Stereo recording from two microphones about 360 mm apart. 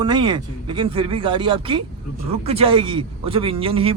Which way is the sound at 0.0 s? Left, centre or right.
Centre.